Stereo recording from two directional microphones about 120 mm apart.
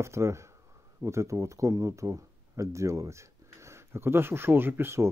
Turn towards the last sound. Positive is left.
turn(degrees=-20)  # may be behind; listen again after turning